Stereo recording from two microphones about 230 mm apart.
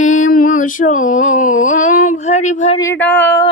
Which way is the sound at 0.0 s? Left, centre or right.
Left.